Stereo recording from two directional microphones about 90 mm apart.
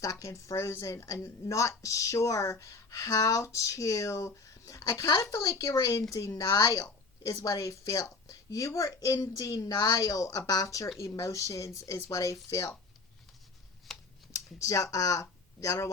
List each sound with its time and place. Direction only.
0.0 s a woman's voice: 40° left (ahead or behind)
13.9 s typing: 5° left (ahead or behind)
14.3 s speech: 35° left (ahead or behind)